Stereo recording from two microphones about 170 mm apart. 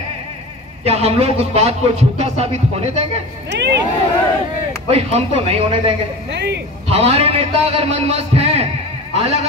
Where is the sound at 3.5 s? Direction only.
90° right.